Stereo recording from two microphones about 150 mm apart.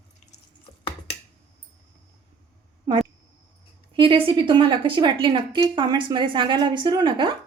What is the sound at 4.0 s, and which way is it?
A woman's voice, 35° right (ahead or behind).